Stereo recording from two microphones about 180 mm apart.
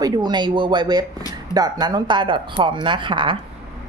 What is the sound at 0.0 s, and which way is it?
Speech, 25° right (ahead or behind).